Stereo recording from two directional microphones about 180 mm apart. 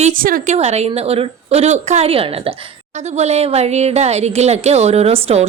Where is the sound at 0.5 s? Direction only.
35° right (ahead or behind).